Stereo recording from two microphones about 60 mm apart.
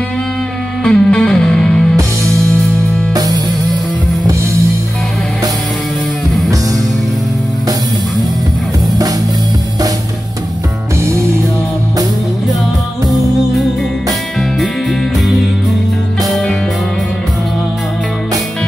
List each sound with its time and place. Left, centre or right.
0.8 s music: centre
3.1 s music: right
11.0 s music: right
14.6 s music: centre